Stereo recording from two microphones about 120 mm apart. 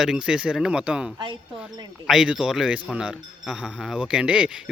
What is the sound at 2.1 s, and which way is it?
A man's voice, 5° right (ahead or behind).